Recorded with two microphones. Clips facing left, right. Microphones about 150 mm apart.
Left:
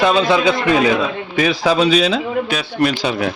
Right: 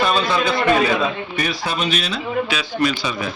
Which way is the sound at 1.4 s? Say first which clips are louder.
Left 10 dB; 90° left.